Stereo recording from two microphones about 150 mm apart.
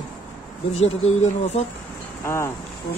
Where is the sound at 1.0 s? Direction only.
45° left (ahead or behind).